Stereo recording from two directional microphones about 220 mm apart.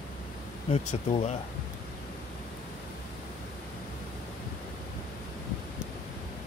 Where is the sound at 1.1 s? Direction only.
30° left (ahead or behind).